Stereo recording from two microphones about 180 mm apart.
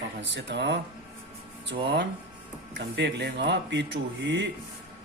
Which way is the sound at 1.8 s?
75° right (ahead or behind).